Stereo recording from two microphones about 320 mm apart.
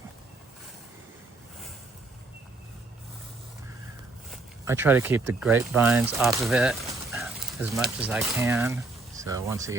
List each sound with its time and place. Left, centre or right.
4.3 s speech: centre